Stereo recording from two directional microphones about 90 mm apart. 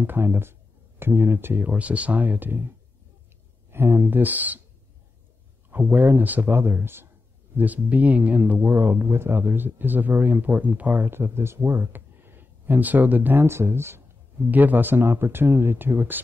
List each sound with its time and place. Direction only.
0.0 s speech: 25° right (ahead or behind)
3.7 s speech: 25° right (ahead or behind)
5.7 s speech: 20° right (ahead or behind)